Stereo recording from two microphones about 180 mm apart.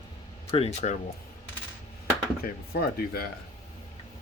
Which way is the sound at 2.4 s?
60° left (ahead or behind).